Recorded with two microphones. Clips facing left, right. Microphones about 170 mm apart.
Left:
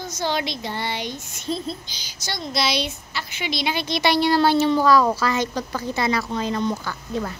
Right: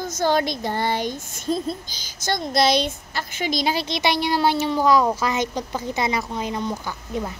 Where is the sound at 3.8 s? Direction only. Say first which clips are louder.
Left 3 dB; 20° right (ahead or behind).